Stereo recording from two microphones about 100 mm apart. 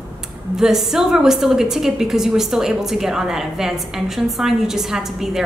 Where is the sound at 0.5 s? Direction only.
5° right (ahead or behind).